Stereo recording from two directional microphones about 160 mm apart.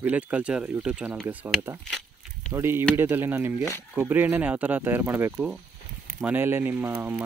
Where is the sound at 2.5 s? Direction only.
15° right (ahead or behind).